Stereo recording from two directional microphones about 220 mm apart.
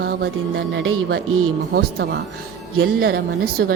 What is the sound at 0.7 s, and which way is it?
Speech, 55° right (ahead or behind).